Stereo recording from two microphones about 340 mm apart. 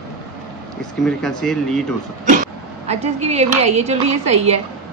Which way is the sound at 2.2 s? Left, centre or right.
Right.